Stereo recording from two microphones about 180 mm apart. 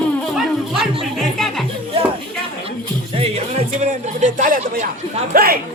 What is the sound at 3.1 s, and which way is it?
Music, 35° right (ahead or behind).